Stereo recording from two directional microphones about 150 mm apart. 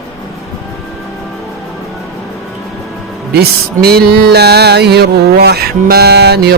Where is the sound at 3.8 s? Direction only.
90° right.